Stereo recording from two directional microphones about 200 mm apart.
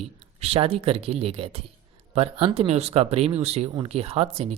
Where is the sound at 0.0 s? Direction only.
30° right (ahead or behind).